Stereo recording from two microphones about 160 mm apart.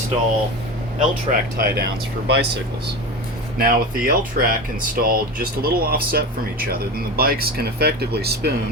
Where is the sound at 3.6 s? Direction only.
65° right (ahead or behind); by 8.5 s 80° right.